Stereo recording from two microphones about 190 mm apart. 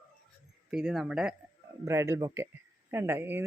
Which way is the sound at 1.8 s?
15° right (ahead or behind).